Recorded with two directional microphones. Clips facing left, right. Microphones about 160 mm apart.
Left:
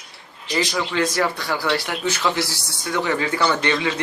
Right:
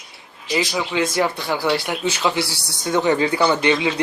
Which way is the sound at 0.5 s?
10° right (ahead or behind).